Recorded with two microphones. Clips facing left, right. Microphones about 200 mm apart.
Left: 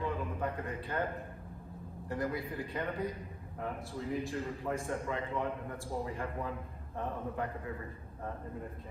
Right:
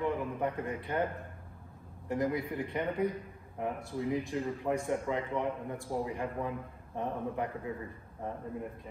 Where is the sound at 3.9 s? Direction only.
15° right (ahead or behind).